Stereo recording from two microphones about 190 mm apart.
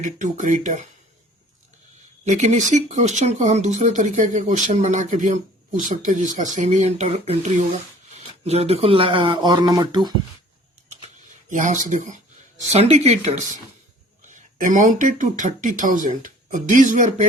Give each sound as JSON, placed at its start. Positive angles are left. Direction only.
{"t": 0.0, "sound": "speech", "side_deg": -40}
{"t": 2.2, "sound": "speech", "side_deg": -40}
{"t": 11.5, "sound": "speech", "side_deg": -40}